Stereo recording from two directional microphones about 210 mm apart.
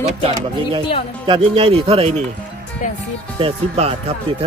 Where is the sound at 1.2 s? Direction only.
25° right (ahead or behind).